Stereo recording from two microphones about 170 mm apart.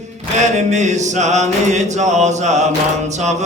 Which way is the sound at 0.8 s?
45° right (ahead or behind).